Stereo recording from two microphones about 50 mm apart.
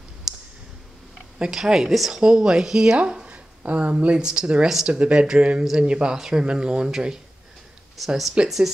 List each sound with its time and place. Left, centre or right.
0.3 s clicking: centre
1.4 s speech: centre
8.0 s speech: centre
8.4 s speech: right